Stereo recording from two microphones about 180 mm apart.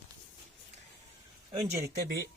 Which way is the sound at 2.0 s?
60° right (ahead or behind).